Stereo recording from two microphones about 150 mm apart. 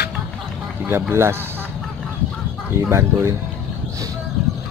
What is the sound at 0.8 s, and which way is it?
Speech, 15° right (ahead or behind).